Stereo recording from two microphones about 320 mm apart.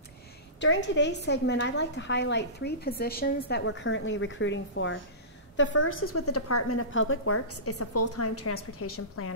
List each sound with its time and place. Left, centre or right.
0.6 s a woman's voice: left